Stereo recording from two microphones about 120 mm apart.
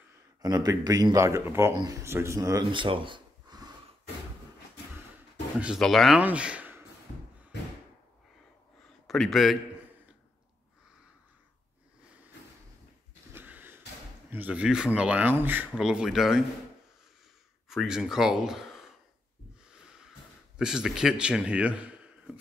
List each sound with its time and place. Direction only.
0.4 s speech: 30° right (ahead or behind)
2.7 s a sound: 45° right (ahead or behind)
5.8 s speech: centre (ahead or behind)
6.1 s a sound: 10° right (ahead or behind)
9.0 s a man's voice: centre (ahead or behind)
13.3 s a sound: 15° right (ahead or behind)
14.3 s speech: 10° right (ahead or behind)
15.8 s speech: 5° right (ahead or behind)
17.6 s speech: 5° right (ahead or behind)
20.5 s speech: 5° right (ahead or behind)